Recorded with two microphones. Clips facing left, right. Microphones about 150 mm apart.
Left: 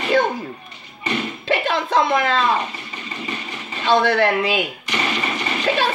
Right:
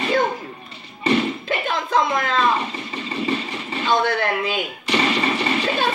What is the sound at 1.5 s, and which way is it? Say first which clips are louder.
Music: left 3 dB; 80° left.